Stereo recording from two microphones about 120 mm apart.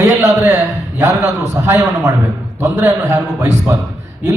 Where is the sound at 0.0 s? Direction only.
20° right (ahead or behind).